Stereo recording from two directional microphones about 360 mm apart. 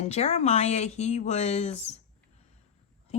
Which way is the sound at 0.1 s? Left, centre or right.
Centre.